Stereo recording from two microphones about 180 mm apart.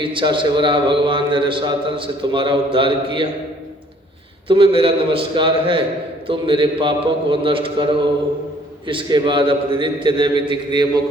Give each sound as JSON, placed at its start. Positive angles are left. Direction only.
{"t": 0.0, "sound": "a man's voice", "side_deg": -25}
{"t": 4.4, "sound": "a man's voice", "side_deg": -30}
{"t": 8.9, "sound": "a man's voice", "side_deg": -25}